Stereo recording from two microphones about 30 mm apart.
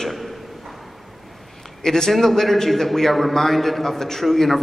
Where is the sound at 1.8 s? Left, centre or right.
Centre.